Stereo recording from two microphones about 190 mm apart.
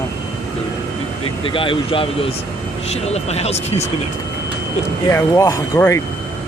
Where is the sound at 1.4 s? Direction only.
25° left (ahead or behind).